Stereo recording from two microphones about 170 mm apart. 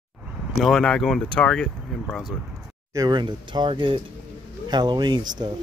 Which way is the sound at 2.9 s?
25° right (ahead or behind).